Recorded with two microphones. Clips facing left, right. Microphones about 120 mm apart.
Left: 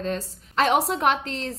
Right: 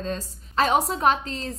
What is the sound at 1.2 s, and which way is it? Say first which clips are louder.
Speech: left 1 dB; 80° left.